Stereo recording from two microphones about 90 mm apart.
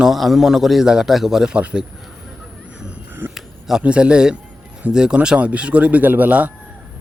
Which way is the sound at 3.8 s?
10° right (ahead or behind).